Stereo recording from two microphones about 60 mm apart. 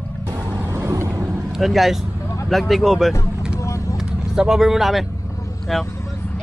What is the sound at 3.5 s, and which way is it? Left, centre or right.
Vehicle, left.